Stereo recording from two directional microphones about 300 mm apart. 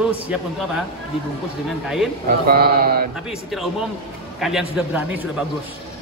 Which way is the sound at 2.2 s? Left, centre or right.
Right.